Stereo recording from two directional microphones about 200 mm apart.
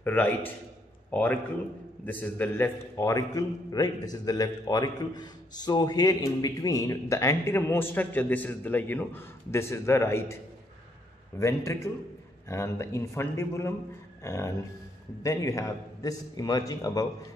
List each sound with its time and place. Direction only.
0.0 s a man's voice: 10° left (ahead or behind)
11.3 s a man's voice: 15° left (ahead or behind)